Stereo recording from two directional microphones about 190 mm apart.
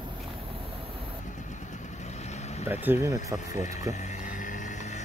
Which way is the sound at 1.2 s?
40° left (ahead or behind).